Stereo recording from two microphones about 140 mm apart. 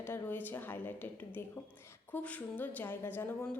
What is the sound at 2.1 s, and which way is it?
A woman's voice, 10° left (ahead or behind).